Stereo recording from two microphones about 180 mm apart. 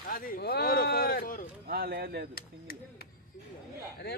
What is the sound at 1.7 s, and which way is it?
Speech, 60° right (ahead or behind).